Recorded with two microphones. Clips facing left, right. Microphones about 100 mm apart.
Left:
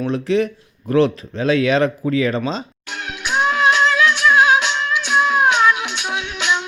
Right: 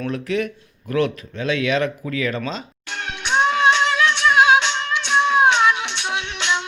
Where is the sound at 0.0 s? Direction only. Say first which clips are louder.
Left 5 dB; 25° left (ahead or behind).